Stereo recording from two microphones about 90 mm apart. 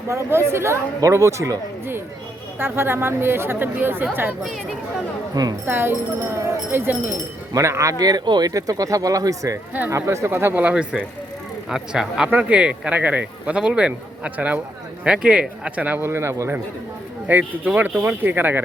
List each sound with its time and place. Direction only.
0.1 s speech: 30° right (ahead or behind)
5.3 s speech: 45° right (ahead or behind)
5.6 s speech: 25° right (ahead or behind)
16.0 s speech: 30° right (ahead or behind)